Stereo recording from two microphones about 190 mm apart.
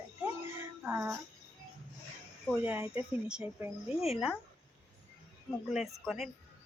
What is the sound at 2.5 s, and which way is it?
Speech, 10° right (ahead or behind).